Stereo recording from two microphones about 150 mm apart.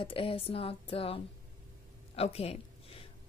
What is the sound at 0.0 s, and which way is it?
Speech, 35° left (ahead or behind).